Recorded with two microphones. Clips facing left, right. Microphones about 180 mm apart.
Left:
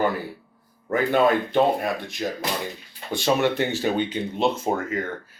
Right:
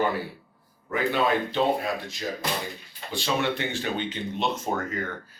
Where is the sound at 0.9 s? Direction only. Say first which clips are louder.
Left 5 dB; 45° left (ahead or behind).